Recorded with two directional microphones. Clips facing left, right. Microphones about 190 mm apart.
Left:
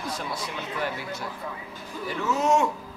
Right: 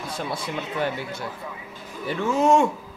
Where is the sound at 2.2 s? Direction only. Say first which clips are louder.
Right 4 dB; 30° right (ahead or behind).